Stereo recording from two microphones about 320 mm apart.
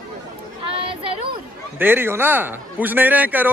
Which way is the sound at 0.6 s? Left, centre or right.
Centre.